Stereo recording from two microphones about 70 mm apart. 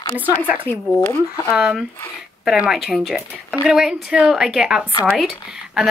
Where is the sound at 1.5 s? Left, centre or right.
Centre.